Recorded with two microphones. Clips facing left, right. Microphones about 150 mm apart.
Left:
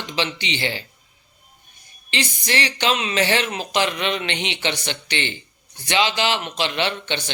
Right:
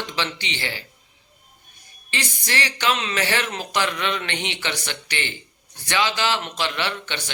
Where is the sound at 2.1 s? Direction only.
20° left (ahead or behind).